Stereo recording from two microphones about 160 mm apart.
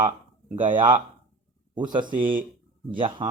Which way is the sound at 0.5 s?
30° right (ahead or behind).